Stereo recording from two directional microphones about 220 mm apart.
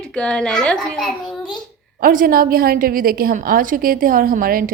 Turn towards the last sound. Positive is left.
turn(degrees=-40)  # may be behind; listen again after turning